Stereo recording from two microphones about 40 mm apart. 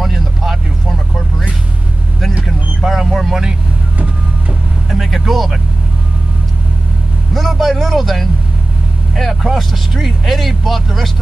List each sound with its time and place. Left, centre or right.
0.0 s vehicle: centre
2.4 s vehicle: centre
4.9 s vehicle: centre
7.3 s vehicle: centre
9.6 s speech: centre